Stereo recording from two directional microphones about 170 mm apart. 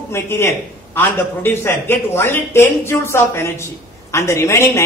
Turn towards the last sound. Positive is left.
turn(degrees=15)  # may be behind; listen again after turning